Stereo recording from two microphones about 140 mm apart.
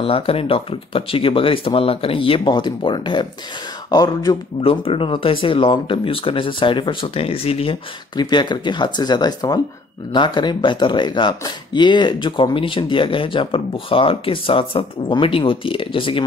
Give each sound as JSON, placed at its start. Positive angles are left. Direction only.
{"t": 0.0, "sound": "speech", "side_deg": 40}
{"t": 4.6, "sound": "speech", "side_deg": 40}
{"t": 8.2, "sound": "speech", "side_deg": 30}